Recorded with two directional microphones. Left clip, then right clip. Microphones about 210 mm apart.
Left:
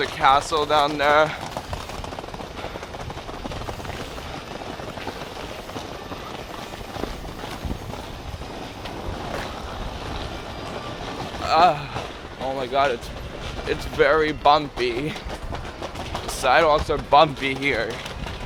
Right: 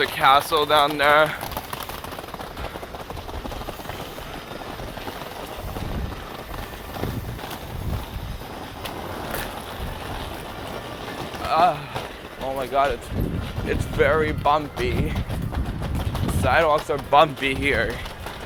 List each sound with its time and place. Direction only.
0.0 s speech: 5° right (ahead or behind)
11.4 s vehicle: 25° left (ahead or behind)
12.5 s speech: 20° left (ahead or behind)
16.4 s speech: 25° left (ahead or behind)
17.4 s speech: centre (ahead or behind)